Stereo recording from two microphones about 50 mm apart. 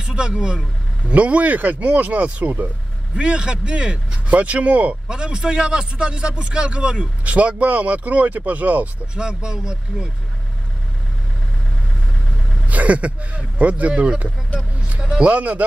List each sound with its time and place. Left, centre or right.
0.0 s speech: centre
3.2 s speech: centre
5.0 s speech: centre
9.1 s speech: centre
12.6 s speech: right